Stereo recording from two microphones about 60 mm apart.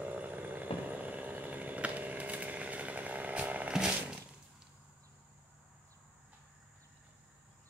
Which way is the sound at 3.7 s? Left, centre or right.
Centre.